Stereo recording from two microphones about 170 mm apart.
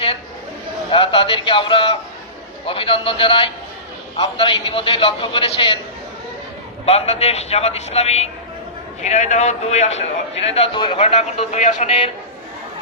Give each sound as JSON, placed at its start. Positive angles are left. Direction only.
{"t": 0.9, "sound": "a man's voice", "side_deg": 30}
{"t": 6.8, "sound": "a man's voice", "side_deg": 35}